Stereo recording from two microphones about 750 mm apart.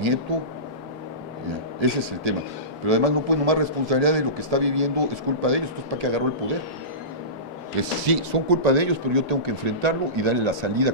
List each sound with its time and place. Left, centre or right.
1.8 s a man's voice: right
8.0 s speech: right